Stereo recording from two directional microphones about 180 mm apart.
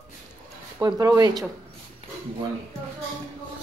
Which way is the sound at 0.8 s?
20° right (ahead or behind).